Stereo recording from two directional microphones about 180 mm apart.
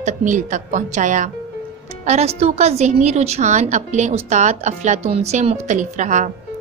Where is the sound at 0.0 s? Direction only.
45° right (ahead or behind).